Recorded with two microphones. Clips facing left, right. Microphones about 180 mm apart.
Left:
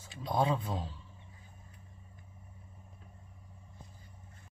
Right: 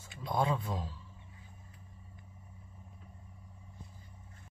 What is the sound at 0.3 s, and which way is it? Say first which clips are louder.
Speech: left 1 dB; 25° left (ahead or behind).